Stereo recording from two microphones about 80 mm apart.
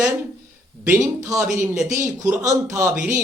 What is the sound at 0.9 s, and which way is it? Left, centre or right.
A man's voice, right.